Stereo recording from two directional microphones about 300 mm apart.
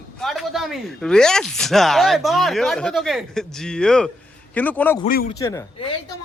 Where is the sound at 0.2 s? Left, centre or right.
Centre.